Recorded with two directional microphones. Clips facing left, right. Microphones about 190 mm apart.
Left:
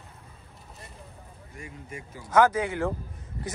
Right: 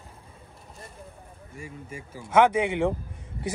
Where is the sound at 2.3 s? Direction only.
25° right (ahead or behind).